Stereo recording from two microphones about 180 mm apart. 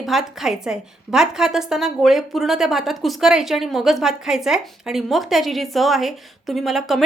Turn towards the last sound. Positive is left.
turn(degrees=0)  # may be behind; listen again after turning